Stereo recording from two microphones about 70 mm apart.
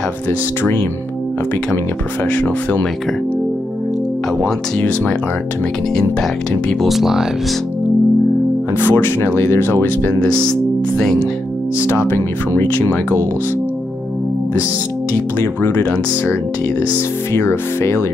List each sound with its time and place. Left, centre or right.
2.2 s speech: centre
4.7 s speech: centre
6.9 s speech: centre
8.7 s speech: left
10.1 s speech: centre
12.0 s speech: left
15.3 s speech: left
17.3 s speech: left